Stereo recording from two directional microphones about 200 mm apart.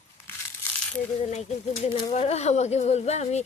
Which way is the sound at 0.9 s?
35° left (ahead or behind).